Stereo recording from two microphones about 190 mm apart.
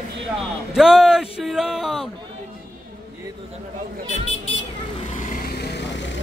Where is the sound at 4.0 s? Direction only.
30° right (ahead or behind).